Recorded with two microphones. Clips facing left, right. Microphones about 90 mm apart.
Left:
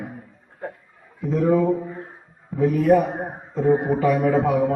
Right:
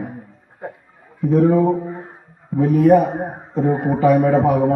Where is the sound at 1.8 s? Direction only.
20° right (ahead or behind).